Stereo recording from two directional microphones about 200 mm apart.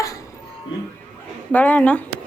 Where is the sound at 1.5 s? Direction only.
10° left (ahead or behind).